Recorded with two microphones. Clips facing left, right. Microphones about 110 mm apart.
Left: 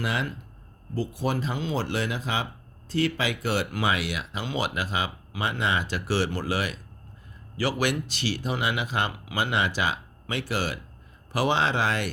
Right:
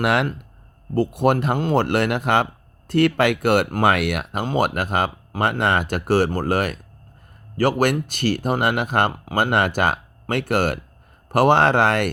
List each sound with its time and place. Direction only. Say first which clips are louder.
0.0 s speech: right 9 dB; 65° right (ahead or behind)